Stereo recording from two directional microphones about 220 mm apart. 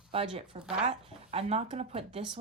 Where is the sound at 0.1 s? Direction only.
25° right (ahead or behind).